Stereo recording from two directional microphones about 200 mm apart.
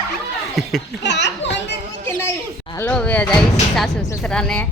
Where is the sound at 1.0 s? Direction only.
60° left (ahead or behind).